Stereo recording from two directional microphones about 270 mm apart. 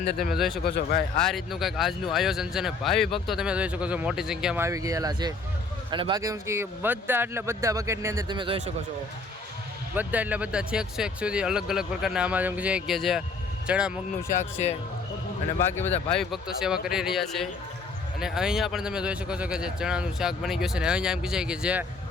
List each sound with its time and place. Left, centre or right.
0.2 s speech: centre
0.6 s speech: left
1.2 s speech: centre
9.9 s speech: centre
16.0 s speech: centre